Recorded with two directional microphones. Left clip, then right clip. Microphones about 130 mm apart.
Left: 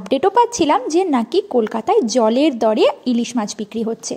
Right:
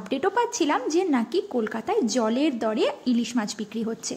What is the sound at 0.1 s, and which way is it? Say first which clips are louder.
A woman's voice: left 10 dB; 40° left (ahead or behind).